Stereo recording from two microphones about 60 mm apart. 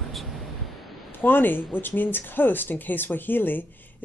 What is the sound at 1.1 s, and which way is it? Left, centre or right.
Speech, left.